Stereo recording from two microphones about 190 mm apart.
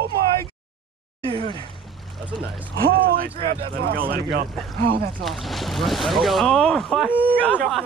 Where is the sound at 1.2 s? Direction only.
30° right (ahead or behind).